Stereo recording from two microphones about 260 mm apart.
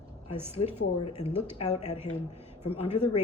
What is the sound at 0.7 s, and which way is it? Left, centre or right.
Speech, left.